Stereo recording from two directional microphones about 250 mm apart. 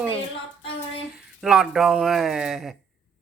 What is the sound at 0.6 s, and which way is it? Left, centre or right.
Child singing, left.